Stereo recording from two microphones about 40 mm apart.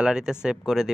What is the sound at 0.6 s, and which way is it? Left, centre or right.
Speech, centre.